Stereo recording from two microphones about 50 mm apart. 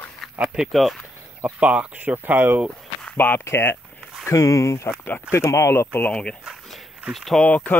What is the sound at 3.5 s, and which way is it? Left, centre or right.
Speech, left.